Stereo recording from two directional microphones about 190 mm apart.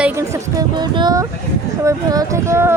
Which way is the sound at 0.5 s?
20° right (ahead or behind).